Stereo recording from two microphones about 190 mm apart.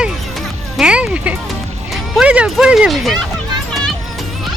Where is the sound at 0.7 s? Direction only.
5° right (ahead or behind).